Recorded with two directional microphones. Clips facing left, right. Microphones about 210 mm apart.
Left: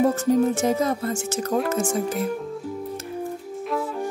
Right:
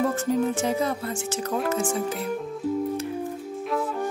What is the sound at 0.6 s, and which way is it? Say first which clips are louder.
Speech: left 3 dB; 45° left (ahead or behind).